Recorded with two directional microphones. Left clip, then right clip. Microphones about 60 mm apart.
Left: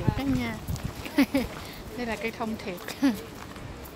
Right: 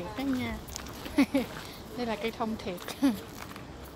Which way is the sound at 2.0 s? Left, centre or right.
Right.